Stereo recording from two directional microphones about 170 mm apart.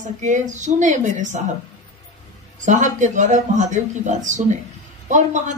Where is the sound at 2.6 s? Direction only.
45° right (ahead or behind).